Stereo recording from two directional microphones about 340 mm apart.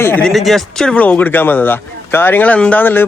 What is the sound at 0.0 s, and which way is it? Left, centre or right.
Speech, centre.